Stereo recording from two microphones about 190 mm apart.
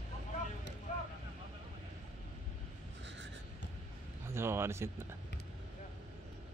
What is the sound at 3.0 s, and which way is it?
Writing, 70° right (ahead or behind).